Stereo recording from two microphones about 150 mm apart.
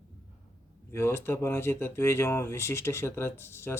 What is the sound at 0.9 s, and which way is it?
Speech, 15° left (ahead or behind).